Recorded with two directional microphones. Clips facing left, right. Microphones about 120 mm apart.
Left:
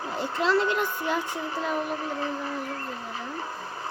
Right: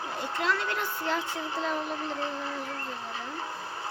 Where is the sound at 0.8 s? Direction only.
15° left (ahead or behind).